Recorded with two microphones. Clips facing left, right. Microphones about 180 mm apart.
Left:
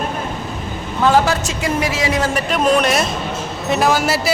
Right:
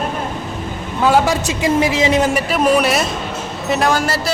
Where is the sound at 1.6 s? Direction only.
20° right (ahead or behind).